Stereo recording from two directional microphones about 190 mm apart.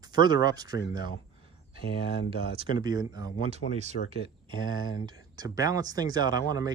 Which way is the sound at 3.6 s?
40° left (ahead or behind).